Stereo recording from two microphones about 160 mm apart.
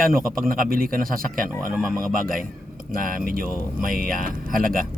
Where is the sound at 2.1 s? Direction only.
60° right (ahead or behind).